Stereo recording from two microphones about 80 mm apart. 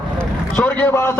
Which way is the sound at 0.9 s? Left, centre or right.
Left.